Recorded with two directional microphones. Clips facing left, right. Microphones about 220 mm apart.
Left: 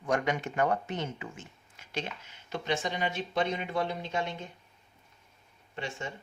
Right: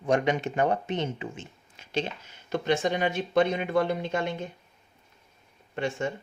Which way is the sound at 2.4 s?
50° right (ahead or behind).